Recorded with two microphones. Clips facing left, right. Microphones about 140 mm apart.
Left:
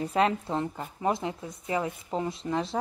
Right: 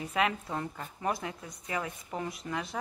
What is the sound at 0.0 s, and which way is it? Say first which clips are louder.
Speech: left 5 dB; 35° left (ahead or behind).